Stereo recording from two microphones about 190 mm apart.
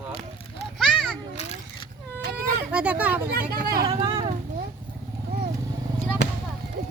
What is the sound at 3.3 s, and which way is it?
Speech, 55° right (ahead or behind).